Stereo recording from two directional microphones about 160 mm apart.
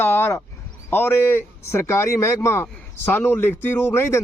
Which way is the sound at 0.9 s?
15° left (ahead or behind).